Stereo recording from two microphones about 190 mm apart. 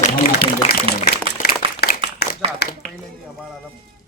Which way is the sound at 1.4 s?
55° left (ahead or behind).